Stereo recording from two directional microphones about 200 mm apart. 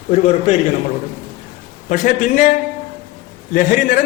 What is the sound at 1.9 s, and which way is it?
A man's voice, 40° left (ahead or behind).